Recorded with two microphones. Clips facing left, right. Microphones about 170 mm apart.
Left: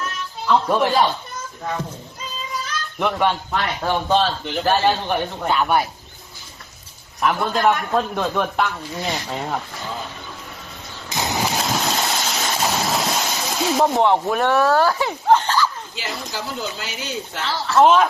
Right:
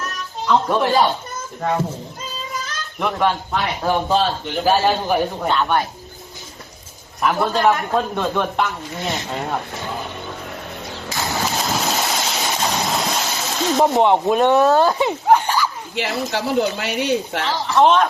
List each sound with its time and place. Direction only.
0.4 s speech: centre (ahead or behind)
3.0 s speech: centre (ahead or behind)
5.5 s speech: 10° left (ahead or behind)
7.2 s speech: centre (ahead or behind)
11.1 s a sound: 20° left (ahead or behind)
11.4 s boat: centre (ahead or behind)
12.5 s a sound: 5° left (ahead or behind)
13.8 s speech: 20° right (ahead or behind)
16.3 s speech: 65° right (ahead or behind)
17.4 s speech: 15° right (ahead or behind)
17.7 s speech: 5° left (ahead or behind)